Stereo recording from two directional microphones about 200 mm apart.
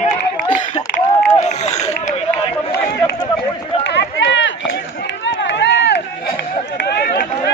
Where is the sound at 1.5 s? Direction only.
35° left (ahead or behind).